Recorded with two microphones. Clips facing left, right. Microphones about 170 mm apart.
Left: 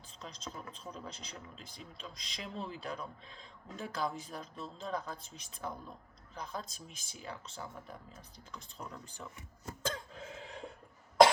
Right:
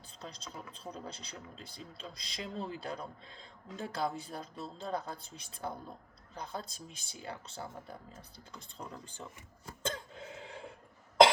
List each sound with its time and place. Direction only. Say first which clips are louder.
0.2 s speech: even; 35° right (ahead or behind)
9.8 s cough: right 1 dB; 30° right (ahead or behind)